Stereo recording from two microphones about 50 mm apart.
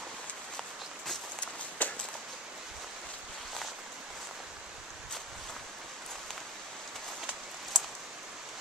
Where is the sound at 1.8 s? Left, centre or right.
Left.